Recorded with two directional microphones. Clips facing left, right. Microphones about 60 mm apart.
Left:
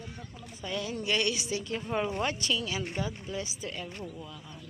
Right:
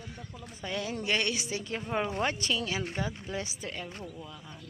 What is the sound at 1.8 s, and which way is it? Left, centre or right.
Speech, centre.